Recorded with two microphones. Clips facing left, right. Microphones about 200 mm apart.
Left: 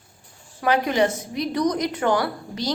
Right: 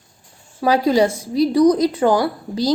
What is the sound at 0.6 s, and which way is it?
A woman's voice, 35° right (ahead or behind).